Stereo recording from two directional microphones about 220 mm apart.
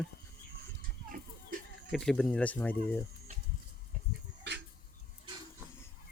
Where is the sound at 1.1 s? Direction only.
40° right (ahead or behind).